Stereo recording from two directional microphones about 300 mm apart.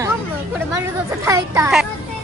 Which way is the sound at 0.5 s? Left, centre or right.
Centre.